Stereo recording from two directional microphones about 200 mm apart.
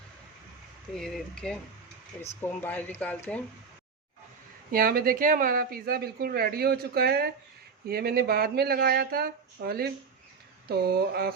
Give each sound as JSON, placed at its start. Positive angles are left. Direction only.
{"t": 0.9, "sound": "speech", "side_deg": 0}
{"t": 4.7, "sound": "speech", "side_deg": -50}